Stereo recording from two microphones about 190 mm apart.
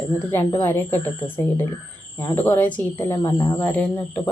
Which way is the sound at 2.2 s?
15° left (ahead or behind).